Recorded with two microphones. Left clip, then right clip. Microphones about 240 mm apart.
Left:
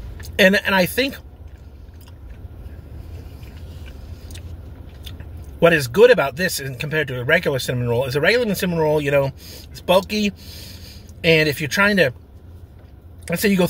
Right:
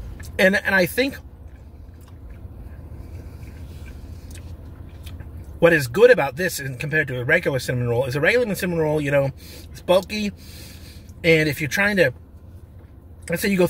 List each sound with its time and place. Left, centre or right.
0.4 s speech: centre
5.6 s speech: centre
13.2 s speech: centre